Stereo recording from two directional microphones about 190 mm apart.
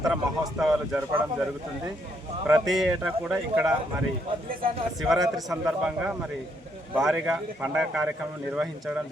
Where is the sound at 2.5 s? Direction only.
5° right (ahead or behind).